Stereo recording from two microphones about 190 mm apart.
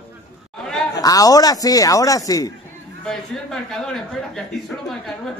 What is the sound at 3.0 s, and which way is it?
A man's voice, centre (ahead or behind).